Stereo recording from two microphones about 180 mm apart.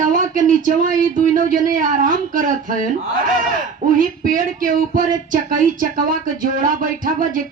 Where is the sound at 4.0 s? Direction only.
50° right (ahead or behind).